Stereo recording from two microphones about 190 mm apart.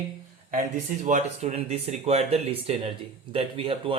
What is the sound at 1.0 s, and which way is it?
Speech, 40° right (ahead or behind).